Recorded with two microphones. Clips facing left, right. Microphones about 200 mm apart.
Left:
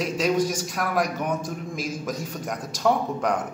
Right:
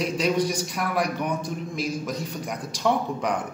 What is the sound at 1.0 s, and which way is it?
A man's voice, 45° left (ahead or behind).